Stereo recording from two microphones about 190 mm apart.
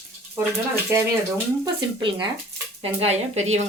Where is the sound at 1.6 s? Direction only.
25° right (ahead or behind).